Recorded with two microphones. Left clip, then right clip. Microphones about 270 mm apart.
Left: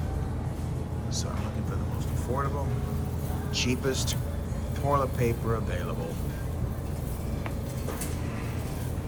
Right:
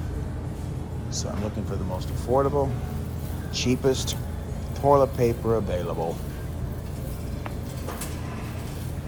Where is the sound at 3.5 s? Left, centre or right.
Right.